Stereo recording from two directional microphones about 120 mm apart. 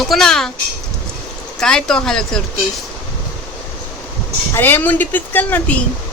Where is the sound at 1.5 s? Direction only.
5° left (ahead or behind).